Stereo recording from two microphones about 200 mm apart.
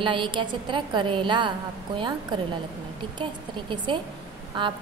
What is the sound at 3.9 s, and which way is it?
Speech, 25° right (ahead or behind).